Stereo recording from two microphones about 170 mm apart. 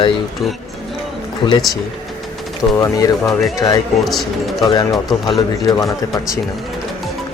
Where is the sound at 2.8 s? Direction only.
20° left (ahead or behind).